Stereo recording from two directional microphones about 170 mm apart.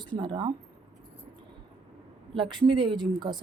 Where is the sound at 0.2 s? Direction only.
30° right (ahead or behind).